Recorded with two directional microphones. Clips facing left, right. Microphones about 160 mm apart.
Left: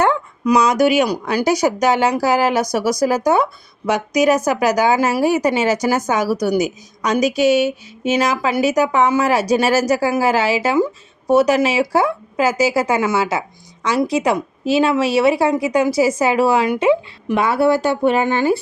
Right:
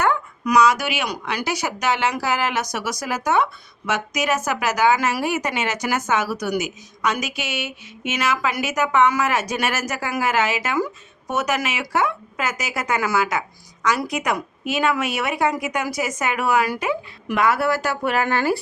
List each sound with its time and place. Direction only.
0.0 s speech: 30° left (ahead or behind)